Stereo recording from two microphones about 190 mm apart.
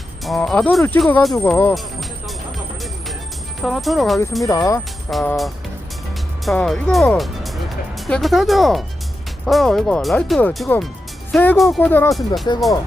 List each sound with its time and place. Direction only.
0.3 s speech: centre (ahead or behind)
1.4 s speech: 10° left (ahead or behind)
1.7 s music: centre (ahead or behind)
3.6 s speech: centre (ahead or behind)
4.4 s speech: 15° left (ahead or behind)
6.4 s speech: centre (ahead or behind)